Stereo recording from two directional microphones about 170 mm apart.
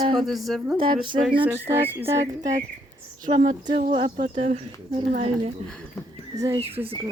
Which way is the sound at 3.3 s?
30° right (ahead or behind).